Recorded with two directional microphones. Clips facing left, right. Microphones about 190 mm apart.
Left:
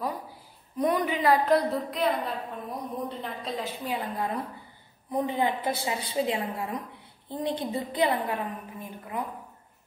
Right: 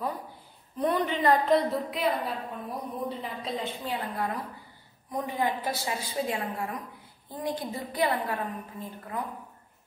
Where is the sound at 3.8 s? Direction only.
15° left (ahead or behind).